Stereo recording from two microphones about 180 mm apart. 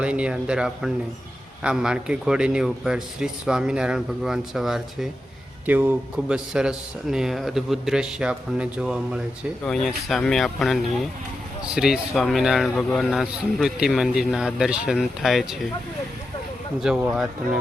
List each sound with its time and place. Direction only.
0.0 s speech: 5° right (ahead or behind)
16.8 s speech: 5° right (ahead or behind)